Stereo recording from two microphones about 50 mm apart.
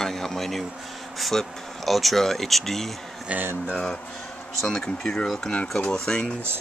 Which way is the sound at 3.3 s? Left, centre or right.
Right.